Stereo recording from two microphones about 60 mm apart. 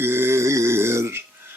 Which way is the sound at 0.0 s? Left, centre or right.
Right.